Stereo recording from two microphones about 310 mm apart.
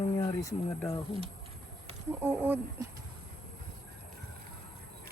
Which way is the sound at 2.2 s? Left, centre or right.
Centre.